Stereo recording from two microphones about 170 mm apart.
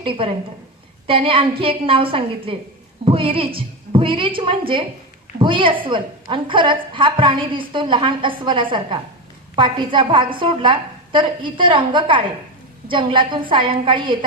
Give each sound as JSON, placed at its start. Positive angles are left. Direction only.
{"t": 0.0, "sound": "a woman's voice", "side_deg": -30}